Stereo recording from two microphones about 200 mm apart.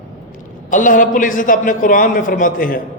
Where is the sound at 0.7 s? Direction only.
40° left (ahead or behind).